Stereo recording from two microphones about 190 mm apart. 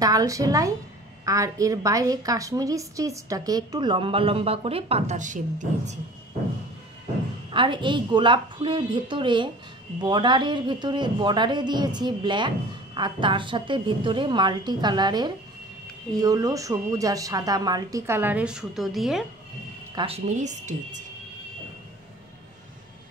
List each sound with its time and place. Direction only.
0.0 s a woman's voice: 20° right (ahead or behind); by 5.9 s 40° right (ahead or behind)
7.5 s a woman's voice: 25° right (ahead or behind); by 19.2 s centre (ahead or behind)
20.2 s speech: 40° right (ahead or behind)